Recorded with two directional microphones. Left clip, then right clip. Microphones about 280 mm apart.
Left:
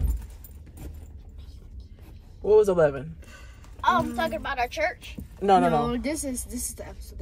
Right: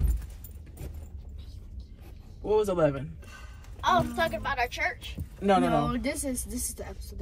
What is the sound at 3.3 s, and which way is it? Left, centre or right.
A woman's voice, centre.